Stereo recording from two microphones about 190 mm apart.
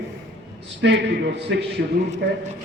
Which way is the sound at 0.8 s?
65° right (ahead or behind).